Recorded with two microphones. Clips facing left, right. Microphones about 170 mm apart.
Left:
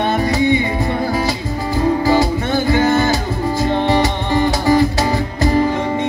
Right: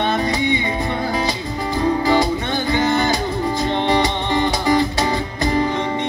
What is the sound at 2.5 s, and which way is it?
Music, 20° right (ahead or behind).